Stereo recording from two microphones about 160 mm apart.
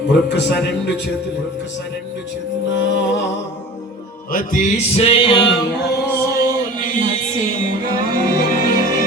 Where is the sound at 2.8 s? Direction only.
90° left.